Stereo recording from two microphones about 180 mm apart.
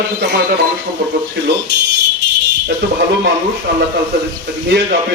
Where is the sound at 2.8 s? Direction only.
70° right (ahead or behind).